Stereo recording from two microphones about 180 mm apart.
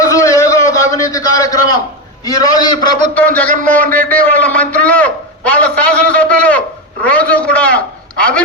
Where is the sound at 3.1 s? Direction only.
10° left (ahead or behind).